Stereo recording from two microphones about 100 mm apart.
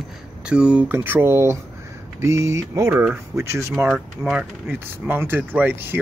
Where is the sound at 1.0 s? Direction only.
25° right (ahead or behind).